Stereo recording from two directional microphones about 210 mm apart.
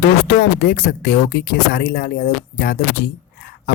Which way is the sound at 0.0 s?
60° left (ahead or behind).